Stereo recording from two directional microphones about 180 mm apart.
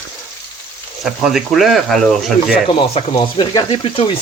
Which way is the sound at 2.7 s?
35° left (ahead or behind).